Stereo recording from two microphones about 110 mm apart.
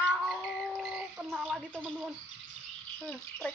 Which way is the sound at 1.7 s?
5° left (ahead or behind).